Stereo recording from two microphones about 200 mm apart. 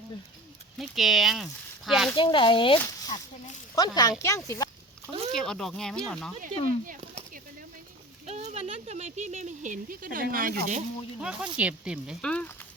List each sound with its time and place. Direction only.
0.8 s speech: centre (ahead or behind)
2.1 s speech: 25° left (ahead or behind)
5.3 s speech: centre (ahead or behind)
8.3 s speech: 35° right (ahead or behind)
11.2 s speech: 5° right (ahead or behind)